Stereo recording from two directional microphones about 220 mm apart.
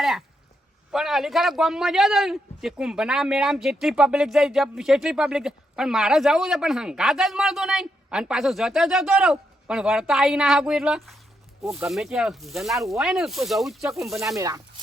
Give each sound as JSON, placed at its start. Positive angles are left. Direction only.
{"t": 0.9, "sound": "a man's voice", "side_deg": 0}
{"t": 14.3, "sound": "speech", "side_deg": -15}